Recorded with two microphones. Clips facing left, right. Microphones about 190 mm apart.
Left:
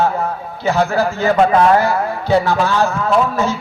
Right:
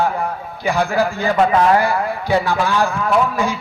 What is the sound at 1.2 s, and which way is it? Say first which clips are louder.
Speech: left 3 dB; 40° left (ahead or behind).